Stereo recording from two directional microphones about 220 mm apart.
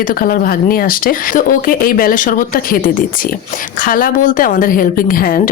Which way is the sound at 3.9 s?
40° left (ahead or behind).